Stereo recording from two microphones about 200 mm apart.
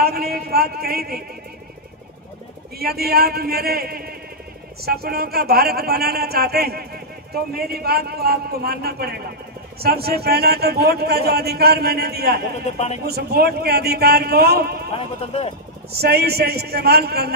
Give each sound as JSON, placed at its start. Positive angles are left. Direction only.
{"t": 0.0, "sound": "speech", "side_deg": -50}
{"t": 2.8, "sound": "speech", "side_deg": -50}
{"t": 12.6, "sound": "speech", "side_deg": 35}
{"t": 13.0, "sound": "speech", "side_deg": -50}
{"t": 14.9, "sound": "speech", "side_deg": 30}
{"t": 15.9, "sound": "speech", "side_deg": -55}